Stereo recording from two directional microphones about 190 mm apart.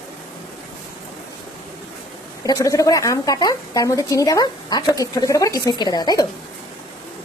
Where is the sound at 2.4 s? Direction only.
15° left (ahead or behind).